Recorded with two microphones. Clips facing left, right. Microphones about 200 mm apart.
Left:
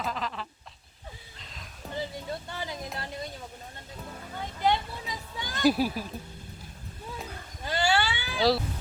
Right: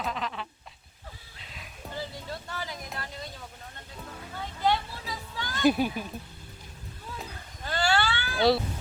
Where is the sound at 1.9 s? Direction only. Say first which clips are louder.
Left 3 dB; 20° left (ahead or behind).